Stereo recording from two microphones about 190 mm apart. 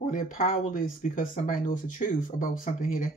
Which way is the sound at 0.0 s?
45° left (ahead or behind).